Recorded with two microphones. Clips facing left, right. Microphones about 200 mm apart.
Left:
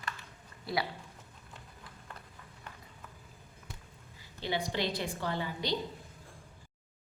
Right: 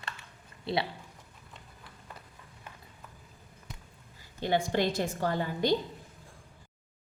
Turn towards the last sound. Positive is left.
turn(degrees=-45)  # may be behind; listen again after turning